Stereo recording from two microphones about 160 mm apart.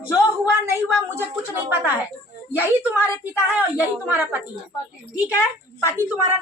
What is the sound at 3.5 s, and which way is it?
Speech, 10° right (ahead or behind).